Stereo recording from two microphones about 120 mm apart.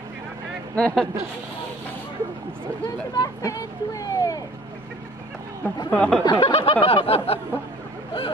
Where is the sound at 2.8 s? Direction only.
30° left (ahead or behind).